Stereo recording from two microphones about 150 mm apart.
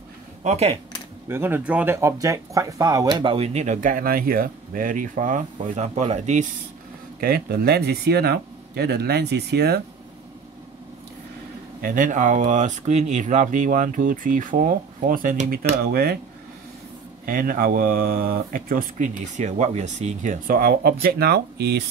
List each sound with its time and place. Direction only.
0.4 s speech: 45° right (ahead or behind)
1.3 s speech: 15° right (ahead or behind); by 6.4 s 50° right (ahead or behind)
7.2 s speech: 90° right
11.8 s speech: 65° right (ahead or behind); by 16.2 s 90° right
17.3 s speech: 75° right (ahead or behind); by 20.3 s 50° right (ahead or behind)
20.4 s speech: 80° right
21.0 s speech: 90° right